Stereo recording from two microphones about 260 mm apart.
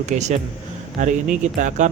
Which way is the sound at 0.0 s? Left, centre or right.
Right.